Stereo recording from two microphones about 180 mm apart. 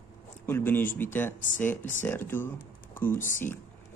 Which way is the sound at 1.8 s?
45° left (ahead or behind).